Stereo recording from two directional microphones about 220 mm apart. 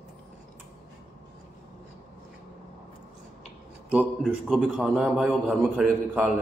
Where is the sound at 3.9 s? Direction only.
Centre (ahead or behind).